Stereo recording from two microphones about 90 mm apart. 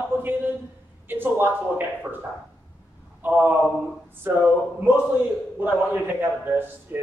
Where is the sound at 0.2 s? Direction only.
20° right (ahead or behind).